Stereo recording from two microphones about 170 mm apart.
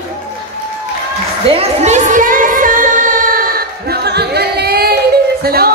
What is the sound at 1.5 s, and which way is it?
Music, 40° right (ahead or behind).